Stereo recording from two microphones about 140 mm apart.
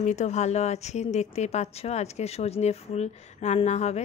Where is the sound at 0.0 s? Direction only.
55° left (ahead or behind).